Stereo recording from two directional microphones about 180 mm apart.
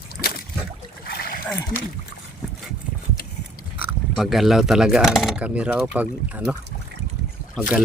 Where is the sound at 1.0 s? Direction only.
55° left (ahead or behind).